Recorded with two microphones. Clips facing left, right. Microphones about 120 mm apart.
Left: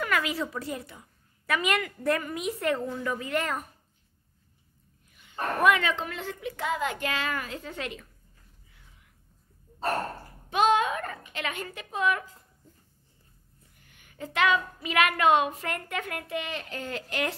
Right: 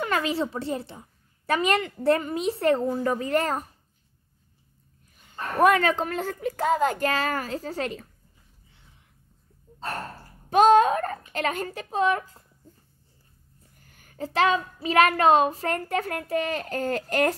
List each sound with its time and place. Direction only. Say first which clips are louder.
0.0 s a child's voice: right 3 dB; 30° right (ahead or behind)
5.6 s a child's voice: right 5 dB; 40° right (ahead or behind)
10.5 s a woman's voice: right 7 dB; 40° right (ahead or behind)
13.7 s a child's voice: right 6 dB; 40° right (ahead or behind)